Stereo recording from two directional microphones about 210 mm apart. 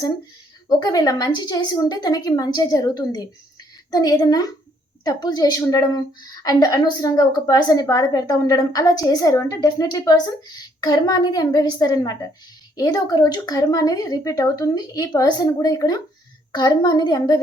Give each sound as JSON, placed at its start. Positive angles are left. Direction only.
{"t": 0.7, "sound": "a woman's voice", "side_deg": 20}